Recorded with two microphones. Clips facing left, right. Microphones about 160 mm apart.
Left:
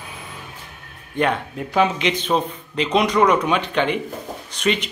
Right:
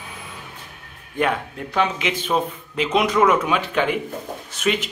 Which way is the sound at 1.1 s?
5° right (ahead or behind).